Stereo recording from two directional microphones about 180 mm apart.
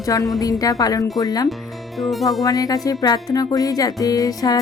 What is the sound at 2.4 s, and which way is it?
Music, 20° left (ahead or behind).